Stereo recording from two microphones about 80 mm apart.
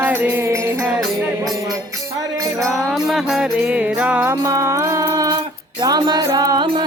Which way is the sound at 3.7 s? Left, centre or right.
Centre.